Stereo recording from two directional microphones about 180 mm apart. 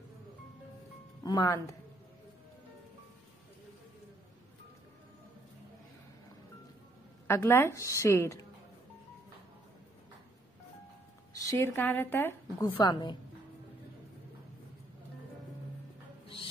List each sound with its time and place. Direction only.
1.2 s speech: 20° left (ahead or behind)
7.2 s speech: 15° left (ahead or behind)
11.4 s speech: 10° left (ahead or behind)